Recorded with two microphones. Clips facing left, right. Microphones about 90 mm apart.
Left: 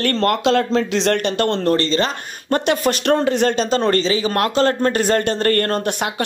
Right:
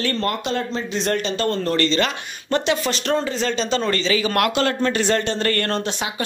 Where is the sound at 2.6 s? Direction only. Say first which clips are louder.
Left 4 dB; 50° left (ahead or behind).